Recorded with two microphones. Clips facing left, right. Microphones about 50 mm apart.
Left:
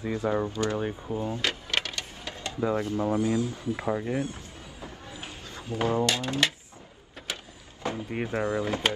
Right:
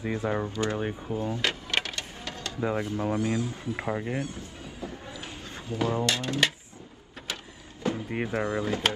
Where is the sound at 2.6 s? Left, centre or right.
Right.